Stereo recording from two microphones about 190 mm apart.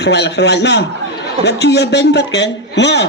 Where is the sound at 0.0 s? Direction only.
65° left (ahead or behind).